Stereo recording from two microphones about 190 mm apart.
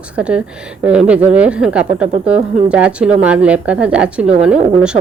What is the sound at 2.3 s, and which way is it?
Speech, 30° right (ahead or behind).